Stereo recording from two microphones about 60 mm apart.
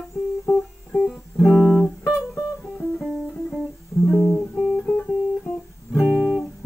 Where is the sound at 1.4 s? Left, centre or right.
Centre.